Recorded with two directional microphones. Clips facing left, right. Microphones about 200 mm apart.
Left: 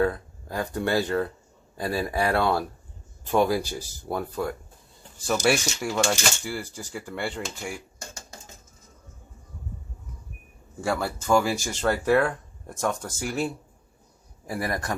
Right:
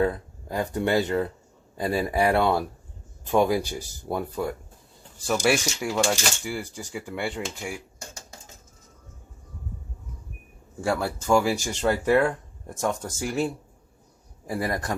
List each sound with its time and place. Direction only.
0.0 s speech: 20° right (ahead or behind)
5.2 s speech: centre (ahead or behind)
10.8 s speech: 10° right (ahead or behind)